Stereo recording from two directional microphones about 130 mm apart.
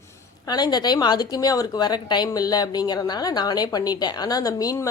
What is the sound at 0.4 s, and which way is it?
A woman's voice, 30° left (ahead or behind).